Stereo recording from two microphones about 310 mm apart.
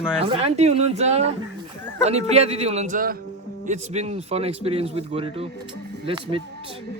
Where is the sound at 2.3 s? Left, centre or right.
Centre.